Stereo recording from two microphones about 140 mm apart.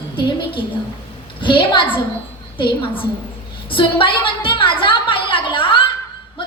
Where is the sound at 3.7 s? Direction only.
40° left (ahead or behind).